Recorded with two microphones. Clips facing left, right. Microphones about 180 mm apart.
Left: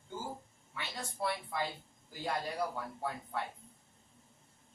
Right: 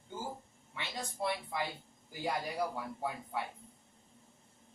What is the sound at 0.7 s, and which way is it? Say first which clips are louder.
A man's voice: right 1 dB; 15° right (ahead or behind).